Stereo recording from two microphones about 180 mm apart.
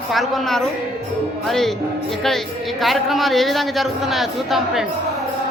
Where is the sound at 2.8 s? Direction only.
Centre (ahead or behind).